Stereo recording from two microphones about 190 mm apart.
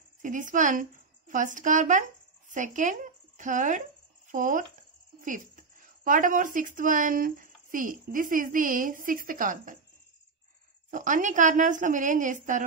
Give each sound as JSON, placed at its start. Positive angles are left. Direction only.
{"t": 0.2, "sound": "a woman's voice", "side_deg": -40}
{"t": 10.9, "sound": "a woman's voice", "side_deg": -45}